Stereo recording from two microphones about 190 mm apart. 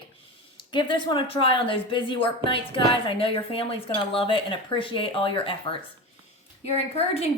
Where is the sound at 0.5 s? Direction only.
25° left (ahead or behind).